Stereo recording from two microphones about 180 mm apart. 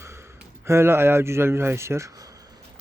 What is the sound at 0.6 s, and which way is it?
Speech, 15° right (ahead or behind).